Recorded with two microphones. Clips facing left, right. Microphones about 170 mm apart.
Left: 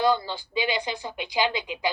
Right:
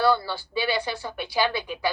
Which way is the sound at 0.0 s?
15° left (ahead or behind).